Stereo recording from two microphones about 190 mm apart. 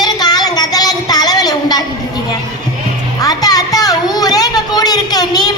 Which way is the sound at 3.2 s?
20° left (ahead or behind).